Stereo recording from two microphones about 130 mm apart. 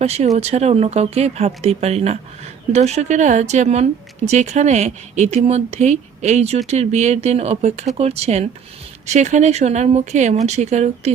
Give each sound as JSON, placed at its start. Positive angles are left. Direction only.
{"t": 0.0, "sound": "speech", "side_deg": -55}